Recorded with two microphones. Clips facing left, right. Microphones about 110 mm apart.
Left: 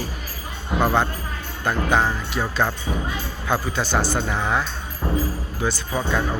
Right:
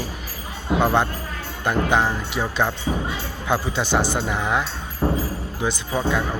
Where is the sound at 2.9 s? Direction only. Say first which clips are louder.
Right 2 dB; 30° right (ahead or behind); by 4.6 s 15° right (ahead or behind).